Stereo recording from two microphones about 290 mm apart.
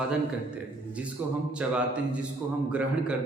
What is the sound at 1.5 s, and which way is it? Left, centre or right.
Speech, centre.